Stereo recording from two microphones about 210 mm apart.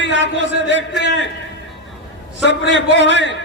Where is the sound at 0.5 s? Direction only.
60° right (ahead or behind).